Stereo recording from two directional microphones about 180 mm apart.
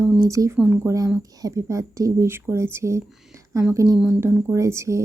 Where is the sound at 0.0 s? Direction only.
15° right (ahead or behind).